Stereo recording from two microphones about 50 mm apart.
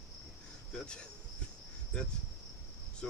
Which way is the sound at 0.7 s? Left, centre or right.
Centre.